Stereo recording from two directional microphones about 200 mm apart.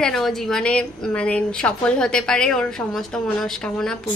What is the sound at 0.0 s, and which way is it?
A woman's voice, centre (ahead or behind).